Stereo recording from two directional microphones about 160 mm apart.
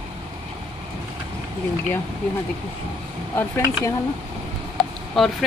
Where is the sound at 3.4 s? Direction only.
20° left (ahead or behind).